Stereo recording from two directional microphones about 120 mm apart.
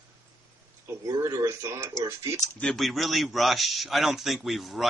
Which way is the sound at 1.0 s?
20° right (ahead or behind).